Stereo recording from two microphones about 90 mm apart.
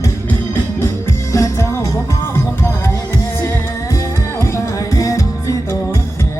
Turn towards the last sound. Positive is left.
turn(degrees=40)  # may be behind; listen again after turning